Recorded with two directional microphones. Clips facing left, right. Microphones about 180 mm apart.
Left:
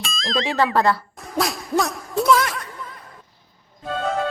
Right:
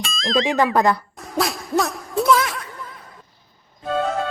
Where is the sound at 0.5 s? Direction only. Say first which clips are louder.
Left 1 dB; 15° right (ahead or behind).